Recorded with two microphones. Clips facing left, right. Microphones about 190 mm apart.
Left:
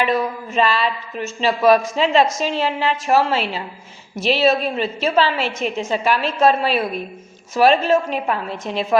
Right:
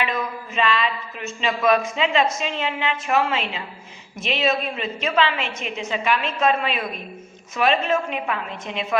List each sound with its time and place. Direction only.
0.0 s speech: 40° left (ahead or behind)